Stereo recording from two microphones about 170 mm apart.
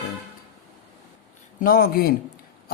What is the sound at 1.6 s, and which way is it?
Speech, 60° left (ahead or behind).